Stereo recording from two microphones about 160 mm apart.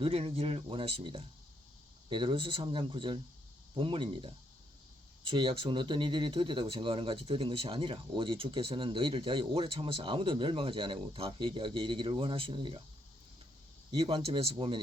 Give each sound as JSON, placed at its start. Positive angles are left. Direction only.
{"t": 0.0, "sound": "speech", "side_deg": -35}
{"t": 13.9, "sound": "speech", "side_deg": -35}